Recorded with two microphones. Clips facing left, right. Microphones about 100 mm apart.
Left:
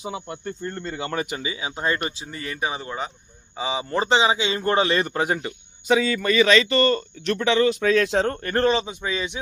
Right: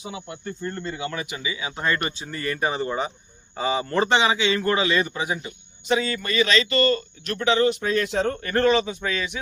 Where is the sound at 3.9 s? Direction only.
25° left (ahead or behind).